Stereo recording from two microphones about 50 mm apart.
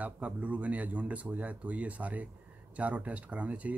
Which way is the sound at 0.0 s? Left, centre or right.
Right.